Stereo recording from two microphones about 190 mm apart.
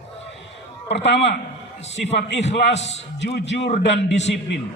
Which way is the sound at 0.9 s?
65° left (ahead or behind).